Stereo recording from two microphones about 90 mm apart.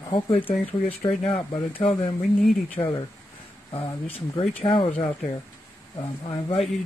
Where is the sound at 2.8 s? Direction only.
65° left (ahead or behind).